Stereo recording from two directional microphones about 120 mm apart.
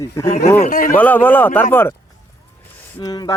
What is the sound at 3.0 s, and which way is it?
Speech, 35° left (ahead or behind).